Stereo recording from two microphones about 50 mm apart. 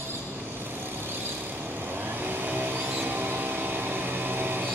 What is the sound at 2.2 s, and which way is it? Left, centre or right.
Vehicle, right.